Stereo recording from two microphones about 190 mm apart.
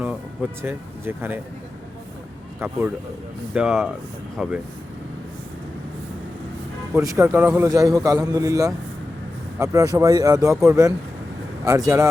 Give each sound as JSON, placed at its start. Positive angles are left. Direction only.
{"t": 0.6, "sound": "a man's voice", "side_deg": -10}
{"t": 2.6, "sound": "a man's voice", "side_deg": -10}
{"t": 6.9, "sound": "a man's voice", "side_deg": -15}